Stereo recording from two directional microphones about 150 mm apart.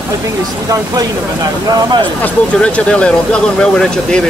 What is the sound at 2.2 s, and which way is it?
Speech, 10° left (ahead or behind).